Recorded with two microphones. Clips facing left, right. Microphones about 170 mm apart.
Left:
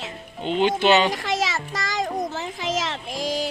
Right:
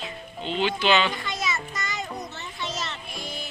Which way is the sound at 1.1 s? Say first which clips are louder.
Left 6 dB; 90° left.